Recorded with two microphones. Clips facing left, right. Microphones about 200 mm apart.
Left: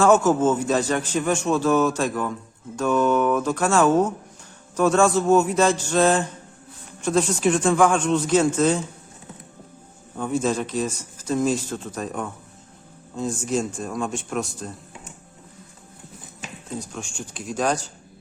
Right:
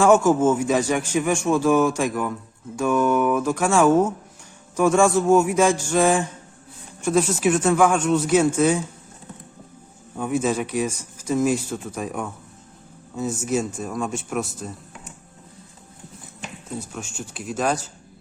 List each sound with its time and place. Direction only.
0.0 s a man's voice: 10° right (ahead or behind)
10.2 s a man's voice: 10° right (ahead or behind)
16.8 s speech: 5° right (ahead or behind)